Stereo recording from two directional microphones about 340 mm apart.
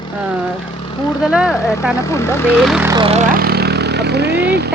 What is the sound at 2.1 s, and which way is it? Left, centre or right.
Speech, centre.